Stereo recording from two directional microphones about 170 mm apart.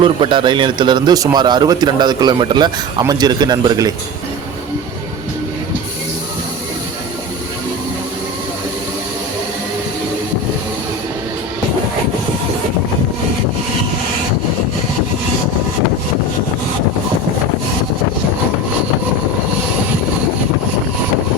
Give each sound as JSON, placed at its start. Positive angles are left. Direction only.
{"t": 0.0, "sound": "a man's voice", "side_deg": -30}